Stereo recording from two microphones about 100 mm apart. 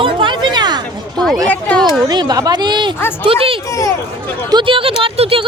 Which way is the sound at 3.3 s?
65° right (ahead or behind).